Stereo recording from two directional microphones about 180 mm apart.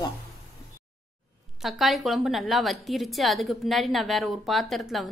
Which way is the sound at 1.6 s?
Centre (ahead or behind).